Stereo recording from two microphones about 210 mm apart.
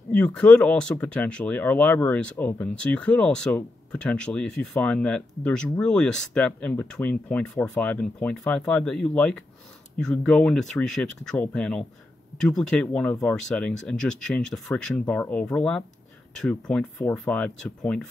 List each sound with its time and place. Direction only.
0.1 s speech: 5° left (ahead or behind)